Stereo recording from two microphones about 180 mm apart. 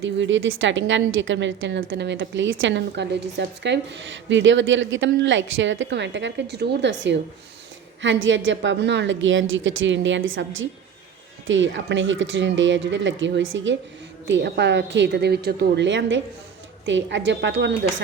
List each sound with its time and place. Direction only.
0.0 s a woman's voice: 90° right
1.8 s a woman's voice: 65° right (ahead or behind)
8.0 s a woman's voice: 90° right
14.3 s a woman's voice: 75° right (ahead or behind)